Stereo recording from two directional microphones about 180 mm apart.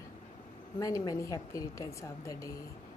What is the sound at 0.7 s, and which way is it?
A woman's voice, 20° left (ahead or behind).